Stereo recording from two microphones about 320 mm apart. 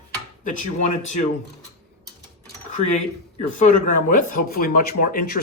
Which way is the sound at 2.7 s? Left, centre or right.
Left.